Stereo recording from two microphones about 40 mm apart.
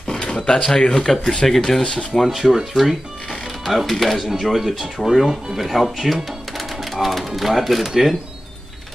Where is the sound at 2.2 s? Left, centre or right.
Centre.